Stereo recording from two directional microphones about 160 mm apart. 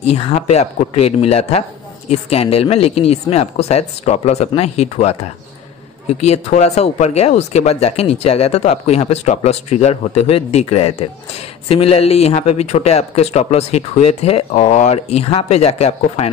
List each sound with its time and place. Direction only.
0.1 s speech: 40° left (ahead or behind)